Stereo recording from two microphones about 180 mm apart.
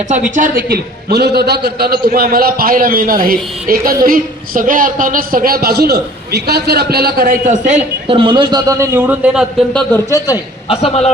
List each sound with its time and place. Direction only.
0.1 s a man's voice: 45° right (ahead or behind)
8.0 s a man's voice: 30° right (ahead or behind); by 9.6 s 5° right (ahead or behind)
9.7 s speech: 15° left (ahead or behind)
10.7 s a man's voice: 35° left (ahead or behind)